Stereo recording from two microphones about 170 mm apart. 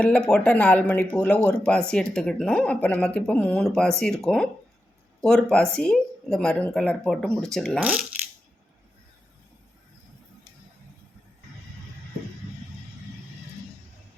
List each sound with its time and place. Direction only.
0.0 s speech: 5° left (ahead or behind)